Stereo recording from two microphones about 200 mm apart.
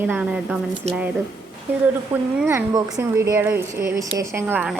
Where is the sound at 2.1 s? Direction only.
10° right (ahead or behind).